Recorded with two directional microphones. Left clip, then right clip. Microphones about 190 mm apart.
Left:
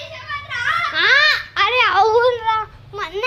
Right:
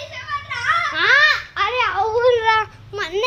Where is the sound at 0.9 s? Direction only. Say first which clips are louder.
Left 1 dB; 5° right (ahead or behind).